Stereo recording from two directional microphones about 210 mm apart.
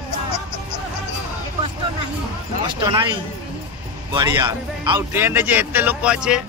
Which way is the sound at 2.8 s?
20° right (ahead or behind).